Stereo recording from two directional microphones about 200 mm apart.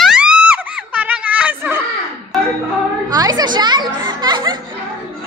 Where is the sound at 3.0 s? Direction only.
20° right (ahead or behind).